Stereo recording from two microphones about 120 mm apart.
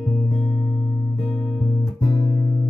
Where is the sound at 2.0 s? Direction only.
40° left (ahead or behind).